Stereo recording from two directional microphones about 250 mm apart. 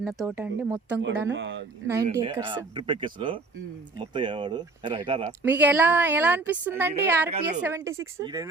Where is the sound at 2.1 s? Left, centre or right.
Centre.